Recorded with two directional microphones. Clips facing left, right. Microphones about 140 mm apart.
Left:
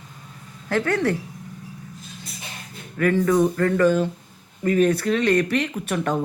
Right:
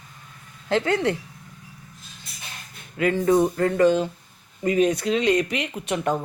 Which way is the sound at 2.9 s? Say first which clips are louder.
Left 2 dB; 15° right (ahead or behind).